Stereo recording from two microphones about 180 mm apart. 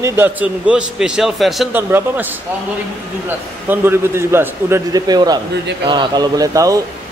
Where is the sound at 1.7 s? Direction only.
10° right (ahead or behind).